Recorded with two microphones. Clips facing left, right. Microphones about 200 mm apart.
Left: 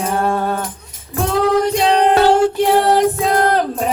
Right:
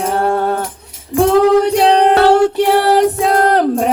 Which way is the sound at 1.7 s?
65° right (ahead or behind).